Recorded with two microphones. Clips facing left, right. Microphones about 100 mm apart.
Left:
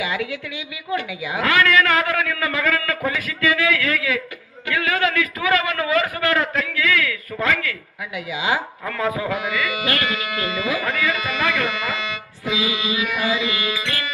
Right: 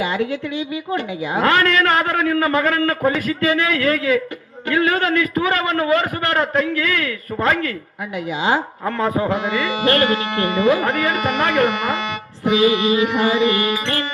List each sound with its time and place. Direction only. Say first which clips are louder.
0.0 s a woman's voice: right 5 dB; 40° right (ahead or behind)